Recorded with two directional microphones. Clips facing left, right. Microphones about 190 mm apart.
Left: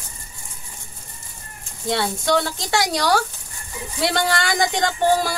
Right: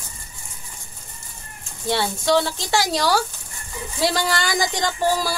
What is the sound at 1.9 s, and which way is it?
Speech, 25° right (ahead or behind).